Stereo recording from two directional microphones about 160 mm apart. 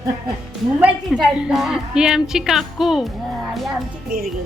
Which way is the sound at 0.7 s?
10° right (ahead or behind).